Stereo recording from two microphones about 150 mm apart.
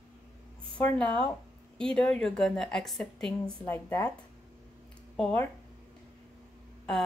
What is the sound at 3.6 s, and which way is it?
Speech, 15° left (ahead or behind).